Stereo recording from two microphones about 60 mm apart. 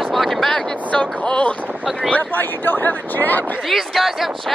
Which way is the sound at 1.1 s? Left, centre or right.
Left.